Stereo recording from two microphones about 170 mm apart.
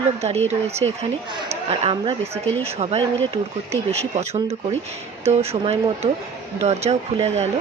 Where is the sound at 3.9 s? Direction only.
40° right (ahead or behind).